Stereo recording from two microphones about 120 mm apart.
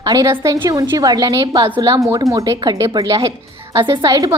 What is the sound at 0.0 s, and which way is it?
A woman's voice, 30° right (ahead or behind).